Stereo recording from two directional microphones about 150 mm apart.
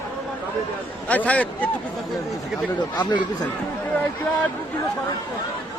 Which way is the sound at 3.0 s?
30° left (ahead or behind).